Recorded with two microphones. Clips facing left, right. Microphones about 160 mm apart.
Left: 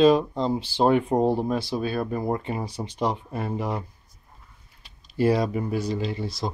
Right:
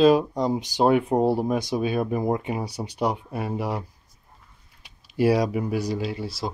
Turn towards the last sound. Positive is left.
turn(degrees=-5)  # may be behind; listen again after turning